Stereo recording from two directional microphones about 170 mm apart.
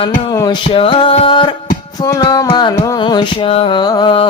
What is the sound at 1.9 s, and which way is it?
Mantra, 20° left (ahead or behind).